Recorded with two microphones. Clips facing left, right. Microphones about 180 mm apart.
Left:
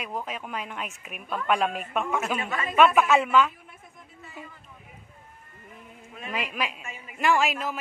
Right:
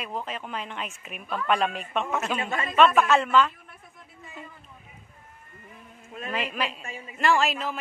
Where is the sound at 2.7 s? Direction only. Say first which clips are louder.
Even; 10° left (ahead or behind).